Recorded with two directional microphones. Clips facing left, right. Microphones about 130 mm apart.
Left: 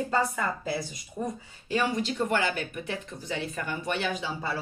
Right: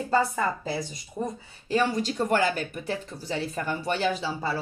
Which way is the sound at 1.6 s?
35° right (ahead or behind).